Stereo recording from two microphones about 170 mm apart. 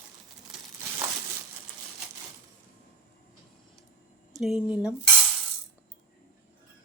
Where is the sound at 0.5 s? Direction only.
5° right (ahead or behind).